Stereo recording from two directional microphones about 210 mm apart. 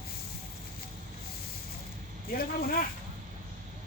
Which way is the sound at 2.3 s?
45° left (ahead or behind).